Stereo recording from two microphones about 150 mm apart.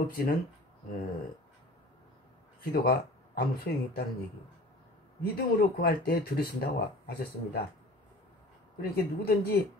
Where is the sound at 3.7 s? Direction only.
90° left.